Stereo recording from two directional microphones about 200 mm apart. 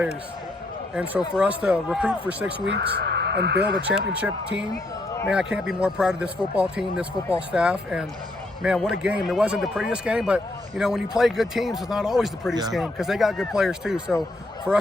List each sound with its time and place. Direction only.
0.9 s speech: 5° right (ahead or behind)
2.6 s speech: 55° right (ahead or behind)
3.6 s speech: 5° right (ahead or behind)